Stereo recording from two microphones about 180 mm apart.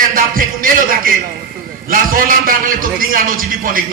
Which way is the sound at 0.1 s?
50° right (ahead or behind).